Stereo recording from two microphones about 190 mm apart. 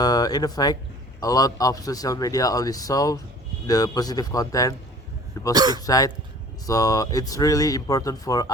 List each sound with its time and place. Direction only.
0.0 s speech: 20° left (ahead or behind)
5.5 s speech: 20° right (ahead or behind)
5.8 s speech: 20° left (ahead or behind)